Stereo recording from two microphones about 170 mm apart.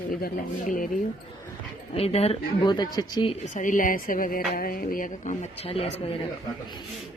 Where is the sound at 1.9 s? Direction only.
35° left (ahead or behind).